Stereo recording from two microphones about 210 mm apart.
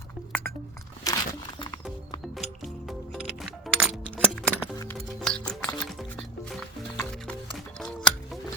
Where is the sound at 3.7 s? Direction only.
Centre (ahead or behind).